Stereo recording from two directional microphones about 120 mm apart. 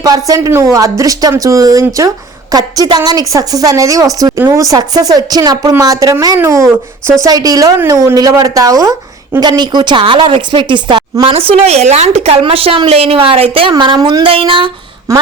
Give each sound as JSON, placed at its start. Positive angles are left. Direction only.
{"t": 0.0, "sound": "a woman's voice", "side_deg": -30}
{"t": 15.1, "sound": "a woman's voice", "side_deg": -30}